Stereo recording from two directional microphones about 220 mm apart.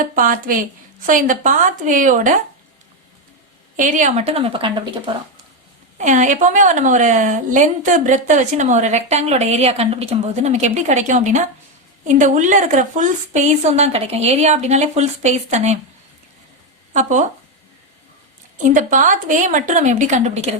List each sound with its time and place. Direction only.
0.0 s a woman's voice: 40° right (ahead or behind)
3.8 s a woman's voice: 35° right (ahead or behind)
6.0 s a woman's voice: 35° right (ahead or behind)
16.9 s a woman's voice: 35° right (ahead or behind)
18.6 s a woman's voice: 35° right (ahead or behind)